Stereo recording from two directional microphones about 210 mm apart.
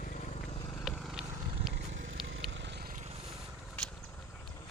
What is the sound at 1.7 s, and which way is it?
Vehicle, 60° right (ahead or behind).